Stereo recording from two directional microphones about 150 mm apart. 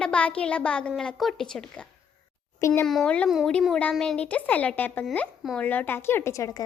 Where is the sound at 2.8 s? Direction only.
5° left (ahead or behind).